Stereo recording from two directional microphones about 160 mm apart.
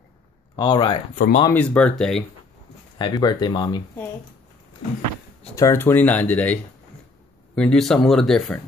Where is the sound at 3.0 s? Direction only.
25° left (ahead or behind).